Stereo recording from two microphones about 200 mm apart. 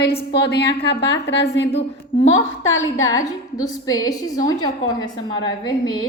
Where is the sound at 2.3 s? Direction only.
80° left.